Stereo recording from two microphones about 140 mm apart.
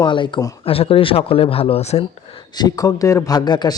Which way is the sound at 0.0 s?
35° left (ahead or behind).